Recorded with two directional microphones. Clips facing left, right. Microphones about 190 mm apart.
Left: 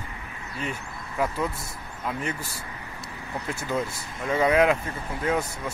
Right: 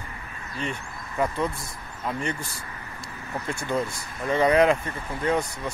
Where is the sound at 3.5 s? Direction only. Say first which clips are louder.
Right 1 dB; 5° left (ahead or behind).